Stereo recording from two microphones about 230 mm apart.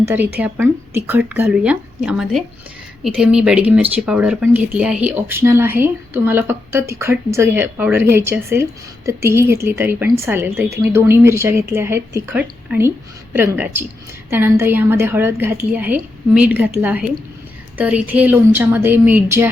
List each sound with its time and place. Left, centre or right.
0.0 s speech: centre